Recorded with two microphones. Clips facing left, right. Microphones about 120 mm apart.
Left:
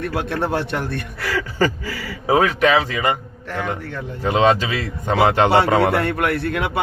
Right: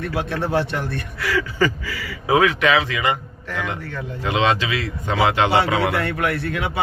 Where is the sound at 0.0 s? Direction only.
50° left (ahead or behind).